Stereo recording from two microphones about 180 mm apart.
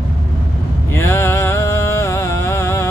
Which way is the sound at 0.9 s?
15° left (ahead or behind).